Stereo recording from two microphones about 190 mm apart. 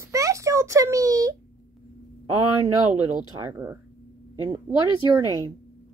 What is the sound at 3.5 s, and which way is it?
A child's voice, 15° right (ahead or behind).